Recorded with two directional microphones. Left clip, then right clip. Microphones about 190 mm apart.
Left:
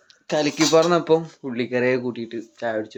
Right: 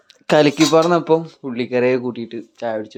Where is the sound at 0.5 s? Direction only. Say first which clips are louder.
Right 3 dB; 20° right (ahead or behind).